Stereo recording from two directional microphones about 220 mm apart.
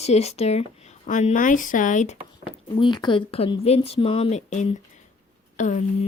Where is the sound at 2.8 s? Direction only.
20° left (ahead or behind).